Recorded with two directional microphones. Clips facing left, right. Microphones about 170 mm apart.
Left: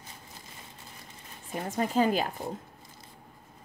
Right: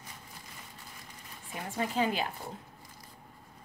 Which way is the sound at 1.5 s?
45° left (ahead or behind).